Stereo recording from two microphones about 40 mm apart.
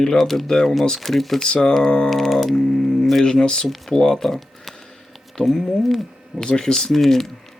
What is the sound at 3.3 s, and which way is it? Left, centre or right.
Speech, centre.